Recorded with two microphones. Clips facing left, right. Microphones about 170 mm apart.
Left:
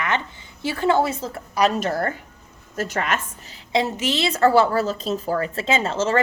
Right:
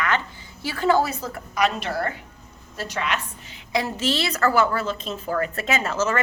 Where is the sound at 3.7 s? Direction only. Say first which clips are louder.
Left 2 dB; 20° left (ahead or behind).